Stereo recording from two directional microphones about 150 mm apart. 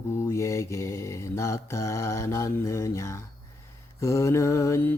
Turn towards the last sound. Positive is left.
turn(degrees=15)  # may be behind; listen again after turning